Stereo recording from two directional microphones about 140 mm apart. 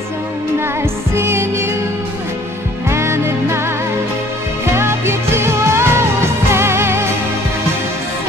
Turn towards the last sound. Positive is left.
turn(degrees=-20)  # may be behind; listen again after turning